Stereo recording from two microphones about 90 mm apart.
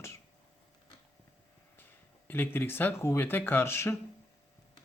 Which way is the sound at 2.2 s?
25° left (ahead or behind).